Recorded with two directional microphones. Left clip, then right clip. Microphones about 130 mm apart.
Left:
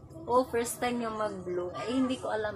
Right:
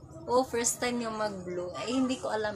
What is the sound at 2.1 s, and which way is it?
Speech, 20° right (ahead or behind).